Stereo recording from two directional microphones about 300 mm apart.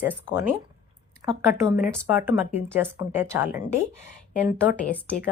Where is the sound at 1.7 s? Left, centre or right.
Centre.